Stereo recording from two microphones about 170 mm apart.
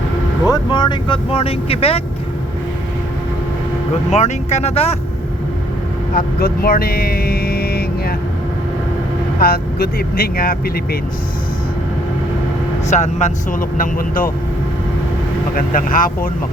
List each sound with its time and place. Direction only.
0.4 s speech: 25° left (ahead or behind)
4.1 s speech: 40° left (ahead or behind)
6.1 s vehicle: 60° left (ahead or behind)
9.4 s speech: 65° left (ahead or behind)
12.9 s speech: 45° left (ahead or behind)
15.5 s speech: 55° left (ahead or behind)